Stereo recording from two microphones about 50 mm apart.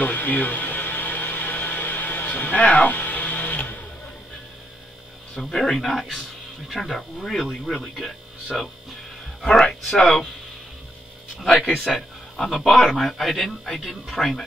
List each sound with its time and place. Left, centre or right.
0.0 s a sound: left
5.3 s speech: centre
11.9 s speech: centre